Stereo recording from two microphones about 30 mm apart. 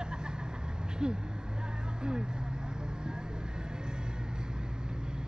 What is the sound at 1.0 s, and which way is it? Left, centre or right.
Speech, right.